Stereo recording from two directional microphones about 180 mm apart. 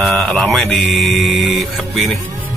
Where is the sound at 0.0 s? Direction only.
5° left (ahead or behind).